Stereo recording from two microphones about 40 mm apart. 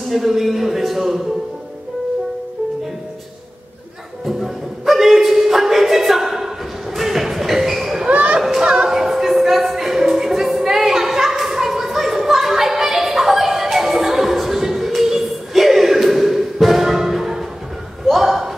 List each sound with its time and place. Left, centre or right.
0.1 s a man's voice: centre
4.3 s music: centre
8.1 s children playing: right
8.4 s children playing: centre
8.6 s music: centre
14.9 s a sound: centre